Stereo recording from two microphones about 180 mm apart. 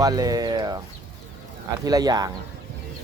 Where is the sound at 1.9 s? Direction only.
20° right (ahead or behind).